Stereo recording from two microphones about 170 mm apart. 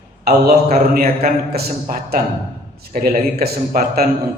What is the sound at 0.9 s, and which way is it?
A man's voice, 60° right (ahead or behind).